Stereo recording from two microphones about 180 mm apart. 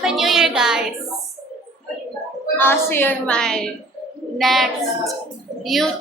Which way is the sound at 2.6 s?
10° left (ahead or behind).